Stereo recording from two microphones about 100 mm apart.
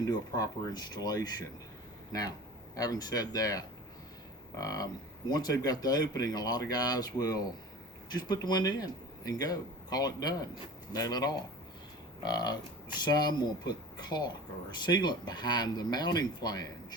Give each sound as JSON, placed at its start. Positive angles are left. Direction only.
{"t": 0.0, "sound": "speech", "side_deg": 40}
{"t": 2.7, "sound": "speech", "side_deg": 40}